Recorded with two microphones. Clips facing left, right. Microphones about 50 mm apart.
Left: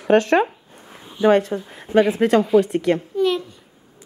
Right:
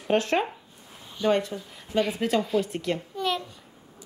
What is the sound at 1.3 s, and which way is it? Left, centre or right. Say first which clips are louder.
A woman's voice: left 8 dB; left.